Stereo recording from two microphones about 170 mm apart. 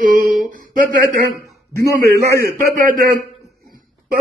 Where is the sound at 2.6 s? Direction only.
55° right (ahead or behind).